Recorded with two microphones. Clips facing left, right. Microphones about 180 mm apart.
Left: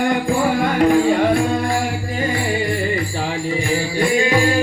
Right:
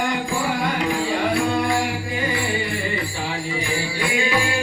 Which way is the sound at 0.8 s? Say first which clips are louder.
Left 8 dB; 50° left (ahead or behind).